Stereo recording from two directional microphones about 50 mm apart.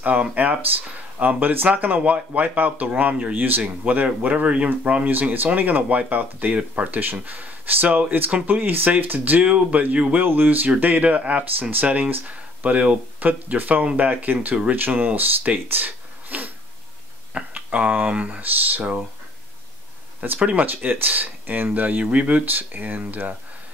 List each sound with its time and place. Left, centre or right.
0.0 s speech: right
3.3 s speech: right
5.0 s speech: right
10.2 s speech: right
10.8 s speech: right
17.6 s a sound: right
18.0 s speech: right
20.3 s speech: right
20.6 s speech: right